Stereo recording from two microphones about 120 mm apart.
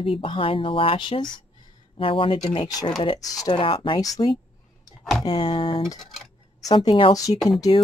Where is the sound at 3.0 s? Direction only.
30° left (ahead or behind).